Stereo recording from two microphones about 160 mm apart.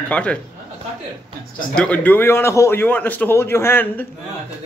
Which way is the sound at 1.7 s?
10° left (ahead or behind).